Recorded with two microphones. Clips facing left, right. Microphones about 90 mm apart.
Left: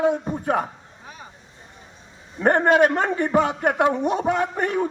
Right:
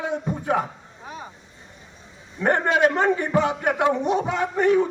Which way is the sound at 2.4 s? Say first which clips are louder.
Left 3 dB; 45° left (ahead or behind).